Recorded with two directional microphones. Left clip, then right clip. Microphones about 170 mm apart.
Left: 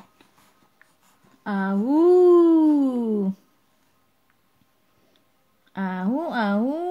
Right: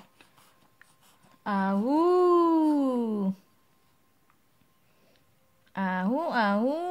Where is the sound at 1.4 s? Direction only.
35° right (ahead or behind).